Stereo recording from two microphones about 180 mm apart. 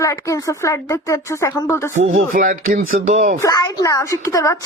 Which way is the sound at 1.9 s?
50° right (ahead or behind).